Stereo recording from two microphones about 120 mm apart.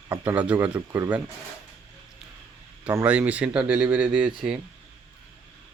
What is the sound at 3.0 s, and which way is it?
Speech, 10° right (ahead or behind).